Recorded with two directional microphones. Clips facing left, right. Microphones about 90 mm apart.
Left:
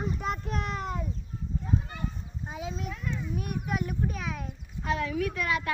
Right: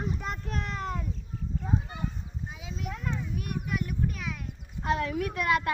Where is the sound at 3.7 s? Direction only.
30° left (ahead or behind).